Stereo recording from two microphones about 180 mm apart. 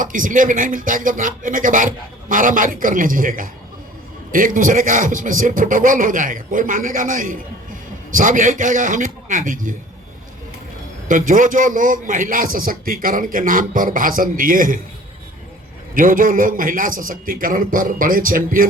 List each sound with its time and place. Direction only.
0.0 s a man's voice: 50° right (ahead or behind)
11.1 s a man's voice: 45° right (ahead or behind)
16.0 s a man's voice: 50° right (ahead or behind)